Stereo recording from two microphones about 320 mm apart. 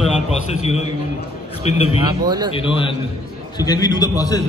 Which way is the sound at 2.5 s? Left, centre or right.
Centre.